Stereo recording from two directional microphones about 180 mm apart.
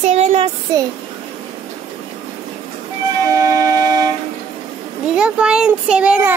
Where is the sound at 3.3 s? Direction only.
20° right (ahead or behind).